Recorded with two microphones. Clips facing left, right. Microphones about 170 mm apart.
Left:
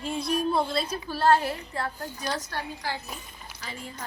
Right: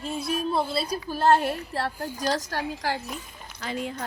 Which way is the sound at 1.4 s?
70° right (ahead or behind).